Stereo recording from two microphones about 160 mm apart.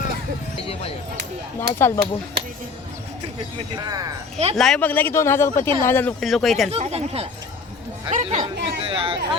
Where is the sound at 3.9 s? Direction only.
20° right (ahead or behind).